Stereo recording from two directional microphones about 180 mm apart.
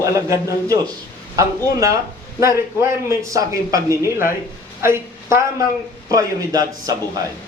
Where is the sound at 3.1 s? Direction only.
20° right (ahead or behind).